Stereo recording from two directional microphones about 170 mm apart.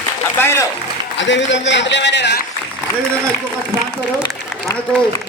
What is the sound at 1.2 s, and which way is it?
A man's voice, 90° left.